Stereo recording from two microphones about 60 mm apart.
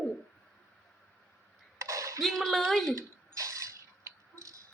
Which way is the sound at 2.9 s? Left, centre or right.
Right.